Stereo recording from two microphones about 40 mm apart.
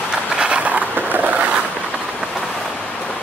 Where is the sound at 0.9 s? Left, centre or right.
Right.